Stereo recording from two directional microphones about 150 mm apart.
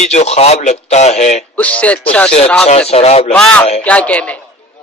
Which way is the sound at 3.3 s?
10° left (ahead or behind).